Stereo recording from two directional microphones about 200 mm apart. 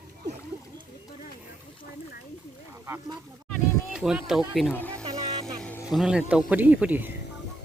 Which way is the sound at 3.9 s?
5° right (ahead or behind).